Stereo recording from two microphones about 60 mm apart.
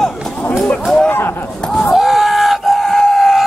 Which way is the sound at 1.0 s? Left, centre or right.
Left.